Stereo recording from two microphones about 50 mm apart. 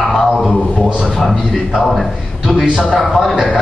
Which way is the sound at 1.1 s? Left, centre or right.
Centre.